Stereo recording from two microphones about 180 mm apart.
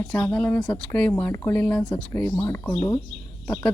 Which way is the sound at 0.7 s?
5° left (ahead or behind).